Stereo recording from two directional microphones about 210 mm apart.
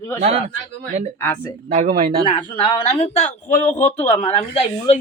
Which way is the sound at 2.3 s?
30° left (ahead or behind).